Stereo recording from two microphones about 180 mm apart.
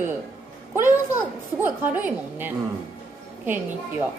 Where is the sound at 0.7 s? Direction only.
15° right (ahead or behind).